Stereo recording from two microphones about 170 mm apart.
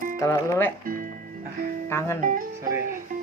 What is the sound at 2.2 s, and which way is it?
Speech, 50° right (ahead or behind).